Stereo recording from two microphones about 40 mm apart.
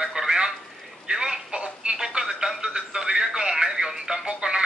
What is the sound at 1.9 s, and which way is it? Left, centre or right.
Telephone, centre.